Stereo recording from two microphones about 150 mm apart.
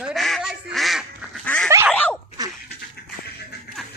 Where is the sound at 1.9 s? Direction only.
10° left (ahead or behind).